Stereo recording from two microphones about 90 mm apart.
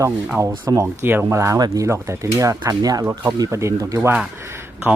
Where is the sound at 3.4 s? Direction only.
35° right (ahead or behind).